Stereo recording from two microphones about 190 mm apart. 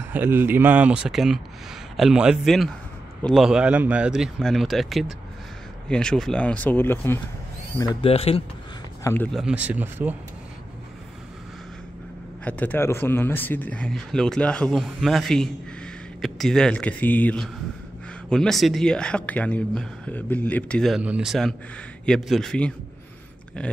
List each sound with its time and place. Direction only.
0.1 s speech: 10° right (ahead or behind); by 7.2 s 10° left (ahead or behind)
7.9 s speech: 30° left (ahead or behind)
9.0 s speech: 10° left (ahead or behind)
9.3 s speech: 5° right (ahead or behind)
12.4 s speech: 10° left (ahead or behind)